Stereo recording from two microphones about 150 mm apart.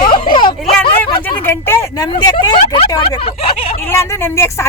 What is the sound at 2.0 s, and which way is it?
Speech, 30° left (ahead or behind).